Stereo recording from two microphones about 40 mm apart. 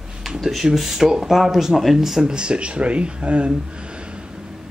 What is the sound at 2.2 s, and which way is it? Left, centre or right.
Speech, right.